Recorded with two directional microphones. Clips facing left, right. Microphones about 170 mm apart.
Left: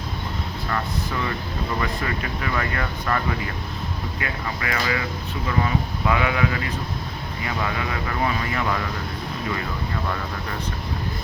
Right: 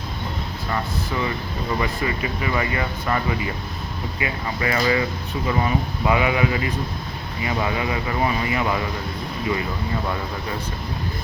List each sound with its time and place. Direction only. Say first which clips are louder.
0.7 s speech: right 2 dB; 15° right (ahead or behind)
4.2 s speech: right 4 dB; 15° right (ahead or behind)
4.6 s speech: right 6 dB; 30° right (ahead or behind)